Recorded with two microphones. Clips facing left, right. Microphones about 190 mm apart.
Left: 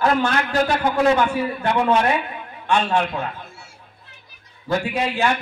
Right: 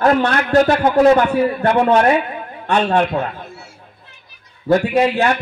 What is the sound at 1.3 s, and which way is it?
Speech, 60° right (ahead or behind).